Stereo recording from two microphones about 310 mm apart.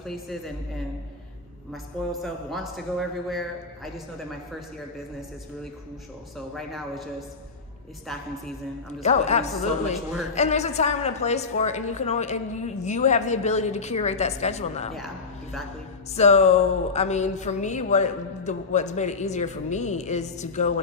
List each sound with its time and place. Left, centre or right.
0.0 s a man's voice: centre
2.2 s a man's voice: centre
6.3 s a man's voice: centre
9.0 s speech: left
16.2 s speech: left